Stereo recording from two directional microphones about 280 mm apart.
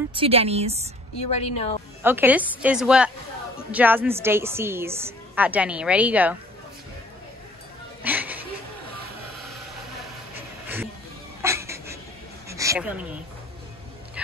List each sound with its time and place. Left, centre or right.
0.1 s speech: centre
1.3 s a woman's voice: left
2.0 s a woman's voice: centre
8.0 s a sound: centre
11.4 s cat: centre
12.4 s a sound: centre